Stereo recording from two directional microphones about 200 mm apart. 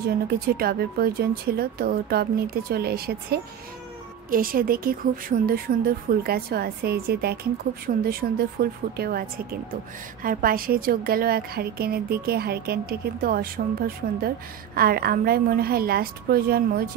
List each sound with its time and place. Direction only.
0.3 s a woman's voice: 50° right (ahead or behind)